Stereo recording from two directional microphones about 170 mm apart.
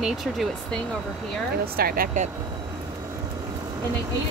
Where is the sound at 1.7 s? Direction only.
60° right (ahead or behind).